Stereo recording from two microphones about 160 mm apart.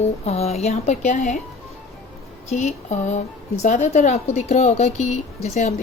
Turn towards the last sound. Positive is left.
turn(degrees=45)  # may be behind; listen again after turning